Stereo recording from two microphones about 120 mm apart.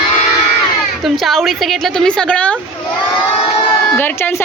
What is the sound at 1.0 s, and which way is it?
A woman's voice, centre (ahead or behind).